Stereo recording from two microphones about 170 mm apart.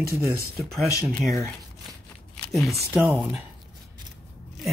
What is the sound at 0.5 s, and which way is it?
Speech, centre (ahead or behind).